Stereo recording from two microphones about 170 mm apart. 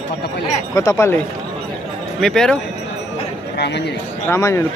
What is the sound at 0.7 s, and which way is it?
Speech, 20° left (ahead or behind).